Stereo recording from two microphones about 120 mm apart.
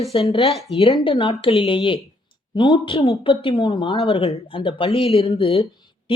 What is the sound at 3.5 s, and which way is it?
Speech, 40° left (ahead or behind).